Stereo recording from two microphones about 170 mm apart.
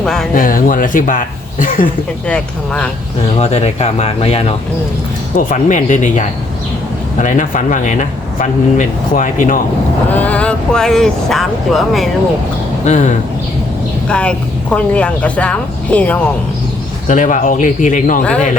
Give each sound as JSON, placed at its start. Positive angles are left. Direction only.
{"t": 0.0, "sound": "speech", "side_deg": 0}
{"t": 0.3, "sound": "speech", "side_deg": 55}
{"t": 2.2, "sound": "a woman's voice", "side_deg": 5}
{"t": 3.3, "sound": "speech", "side_deg": 40}
{"t": 5.4, "sound": "speech", "side_deg": 50}
{"t": 10.1, "sound": "speech", "side_deg": 10}
{"t": 12.8, "sound": "speech", "side_deg": 45}
{"t": 14.1, "sound": "a woman's voice", "side_deg": 5}
{"t": 17.1, "sound": "speech", "side_deg": 50}